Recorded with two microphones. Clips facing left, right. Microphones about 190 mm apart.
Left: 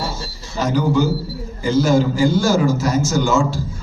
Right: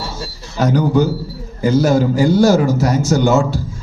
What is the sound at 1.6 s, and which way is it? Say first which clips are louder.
A man's voice: right 2 dB; 55° right (ahead or behind).